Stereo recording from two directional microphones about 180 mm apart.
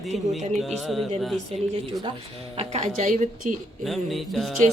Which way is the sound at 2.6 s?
35° right (ahead or behind).